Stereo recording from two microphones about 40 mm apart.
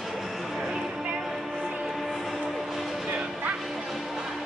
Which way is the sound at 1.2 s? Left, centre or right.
Centre.